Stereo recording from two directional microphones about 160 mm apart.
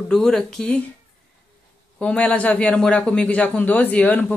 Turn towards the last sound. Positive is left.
turn(degrees=10)  # may be behind; listen again after turning